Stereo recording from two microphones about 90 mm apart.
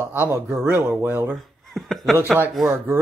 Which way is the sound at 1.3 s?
Centre (ahead or behind).